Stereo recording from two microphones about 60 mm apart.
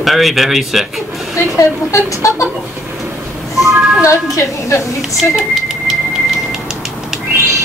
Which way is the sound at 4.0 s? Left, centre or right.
Left.